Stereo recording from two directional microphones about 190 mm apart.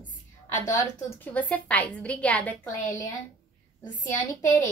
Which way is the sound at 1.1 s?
10° left (ahead or behind).